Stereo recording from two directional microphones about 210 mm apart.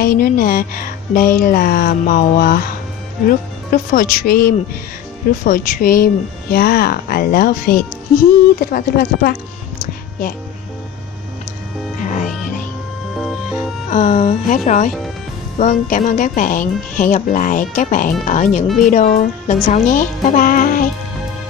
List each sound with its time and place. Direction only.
0.0 s speech: 45° left (ahead or behind)
12.0 s music: 35° left (ahead or behind)
13.2 s music: centre (ahead or behind)
13.8 s speech: 35° left (ahead or behind)